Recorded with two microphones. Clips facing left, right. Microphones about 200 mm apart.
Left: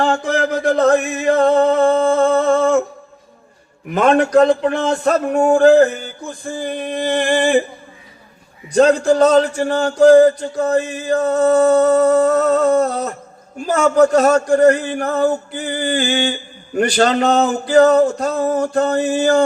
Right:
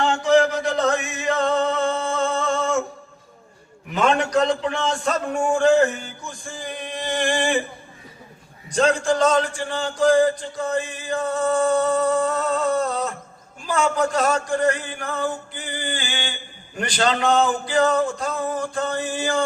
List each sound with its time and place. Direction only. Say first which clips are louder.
0.0 s a sound: even; 55° left (ahead or behind)
3.9 s a man's voice: left 7 dB; 55° left (ahead or behind)
5.7 s male singing: left 6 dB; 35° left (ahead or behind)
6.6 s a man's voice: left 9 dB; 55° left (ahead or behind)
7.3 s male singing: left 9 dB; 40° left (ahead or behind)
8.7 s a man's voice: left 7 dB; 60° left (ahead or behind)
10.0 s male singing: left 8 dB; 40° left (ahead or behind)
16.7 s a man's voice: left 12 dB; 65° left (ahead or behind)
17.0 s male singing: left 4 dB; 40° left (ahead or behind)